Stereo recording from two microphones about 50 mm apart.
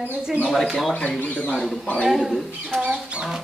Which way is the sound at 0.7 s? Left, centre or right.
Centre.